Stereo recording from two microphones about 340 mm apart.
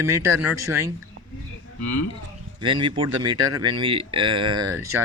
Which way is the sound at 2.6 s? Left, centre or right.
Centre.